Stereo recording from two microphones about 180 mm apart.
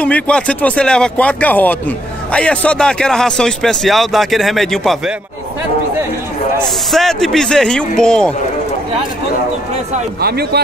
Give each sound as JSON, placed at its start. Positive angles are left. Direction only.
{"t": 0.0, "sound": "speech", "side_deg": 5}
{"t": 6.9, "sound": "speech", "side_deg": 0}
{"t": 10.2, "sound": "speech", "side_deg": -60}